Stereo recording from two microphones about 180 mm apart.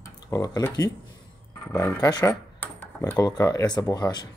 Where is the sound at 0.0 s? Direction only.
20° left (ahead or behind).